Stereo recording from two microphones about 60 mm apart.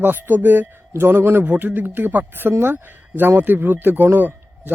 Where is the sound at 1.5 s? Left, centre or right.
Right.